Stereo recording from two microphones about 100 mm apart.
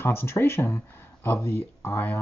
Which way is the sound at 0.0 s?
25° left (ahead or behind).